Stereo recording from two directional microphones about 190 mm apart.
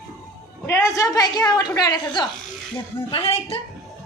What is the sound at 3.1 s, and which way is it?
Speech, 30° left (ahead or behind).